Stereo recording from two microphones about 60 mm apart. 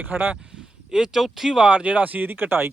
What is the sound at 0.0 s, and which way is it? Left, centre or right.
Speech, right.